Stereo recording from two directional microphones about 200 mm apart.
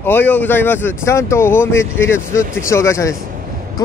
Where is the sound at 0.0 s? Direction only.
10° left (ahead or behind).